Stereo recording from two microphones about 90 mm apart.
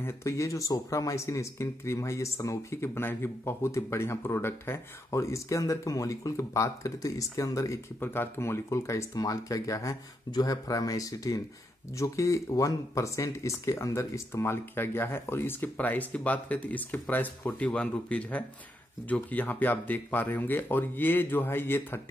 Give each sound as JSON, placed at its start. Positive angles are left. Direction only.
{"t": 0.0, "sound": "speech", "side_deg": 30}
{"t": 8.0, "sound": "speech", "side_deg": 25}